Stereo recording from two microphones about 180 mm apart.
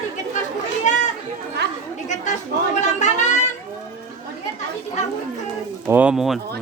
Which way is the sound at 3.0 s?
40° left (ahead or behind).